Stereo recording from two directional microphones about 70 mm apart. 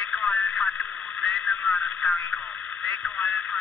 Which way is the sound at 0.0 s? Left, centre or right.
Centre.